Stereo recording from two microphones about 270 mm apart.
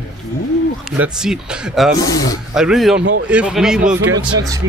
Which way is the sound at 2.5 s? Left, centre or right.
Centre.